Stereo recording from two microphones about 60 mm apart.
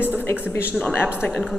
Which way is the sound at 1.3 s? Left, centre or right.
Centre.